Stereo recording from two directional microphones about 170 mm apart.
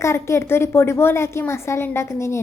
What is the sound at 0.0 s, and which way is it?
A woman's voice, 15° left (ahead or behind).